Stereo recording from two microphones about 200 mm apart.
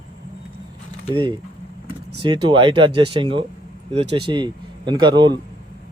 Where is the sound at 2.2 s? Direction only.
25° right (ahead or behind).